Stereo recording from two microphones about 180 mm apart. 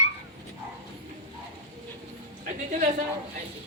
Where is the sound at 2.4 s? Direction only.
45° right (ahead or behind).